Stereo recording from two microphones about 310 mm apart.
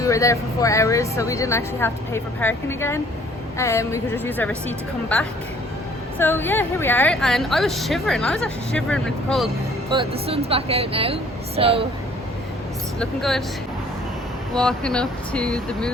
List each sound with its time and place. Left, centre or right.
0.0 s speech: centre
6.1 s a woman's voice: centre
9.9 s a woman's voice: centre
13.0 s a woman's voice: centre
14.5 s a woman's voice: centre